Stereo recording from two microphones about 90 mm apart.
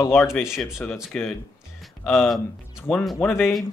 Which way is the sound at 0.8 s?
15° left (ahead or behind).